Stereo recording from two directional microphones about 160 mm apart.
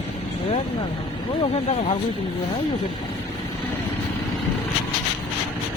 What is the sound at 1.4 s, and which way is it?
Speech, 40° left (ahead or behind).